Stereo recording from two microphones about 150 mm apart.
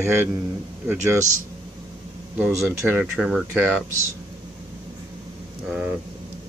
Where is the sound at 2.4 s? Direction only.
15° right (ahead or behind).